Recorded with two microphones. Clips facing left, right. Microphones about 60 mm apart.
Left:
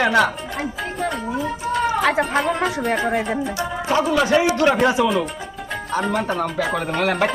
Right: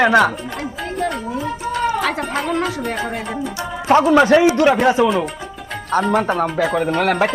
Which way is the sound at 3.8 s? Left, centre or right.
Right.